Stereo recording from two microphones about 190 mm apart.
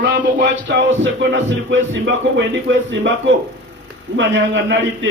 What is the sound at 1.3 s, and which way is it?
A man's voice, 75° right (ahead or behind).